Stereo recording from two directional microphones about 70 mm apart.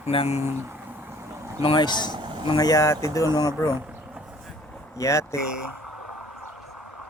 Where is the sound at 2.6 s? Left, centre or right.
Left.